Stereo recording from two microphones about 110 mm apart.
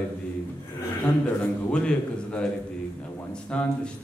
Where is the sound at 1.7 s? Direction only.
10° left (ahead or behind).